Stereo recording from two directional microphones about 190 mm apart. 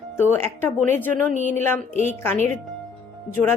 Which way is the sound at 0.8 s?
40° right (ahead or behind).